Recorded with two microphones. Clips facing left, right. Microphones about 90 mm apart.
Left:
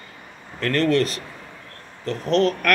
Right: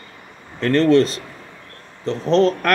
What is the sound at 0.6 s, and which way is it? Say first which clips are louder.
Speech: right 5 dB; 30° right (ahead or behind).